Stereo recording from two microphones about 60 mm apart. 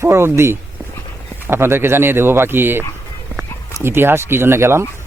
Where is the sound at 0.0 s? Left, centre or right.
Right.